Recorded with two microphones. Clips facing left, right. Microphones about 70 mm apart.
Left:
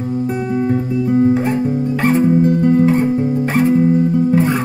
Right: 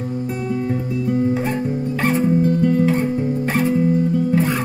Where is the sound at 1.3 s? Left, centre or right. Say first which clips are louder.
Left 5 dB; centre.